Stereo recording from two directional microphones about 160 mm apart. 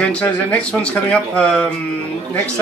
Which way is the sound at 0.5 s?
5° left (ahead or behind).